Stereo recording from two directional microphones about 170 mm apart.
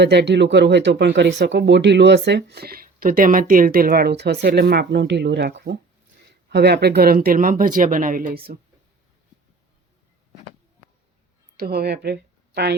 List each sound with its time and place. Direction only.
0.0 s speech: 80° right
6.5 s speech: 75° right (ahead or behind)
11.5 s speech: 65° right (ahead or behind)